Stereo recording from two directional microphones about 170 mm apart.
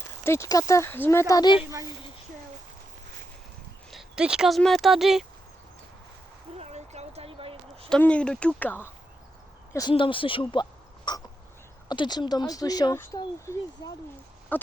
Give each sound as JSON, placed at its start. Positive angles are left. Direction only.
{"t": 0.3, "sound": "speech", "side_deg": 20}
{"t": 3.9, "sound": "speech", "side_deg": -5}
{"t": 6.6, "sound": "a sound", "side_deg": -40}
{"t": 7.9, "sound": "speech", "side_deg": 5}
{"t": 9.9, "sound": "speech", "side_deg": 30}
{"t": 14.5, "sound": "a sound", "side_deg": 10}